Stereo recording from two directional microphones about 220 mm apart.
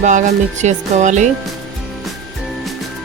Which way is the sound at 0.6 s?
35° right (ahead or behind).